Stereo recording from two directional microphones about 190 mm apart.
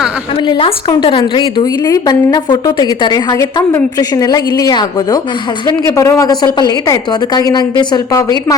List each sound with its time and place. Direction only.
0.4 s a woman's voice: 25° left (ahead or behind)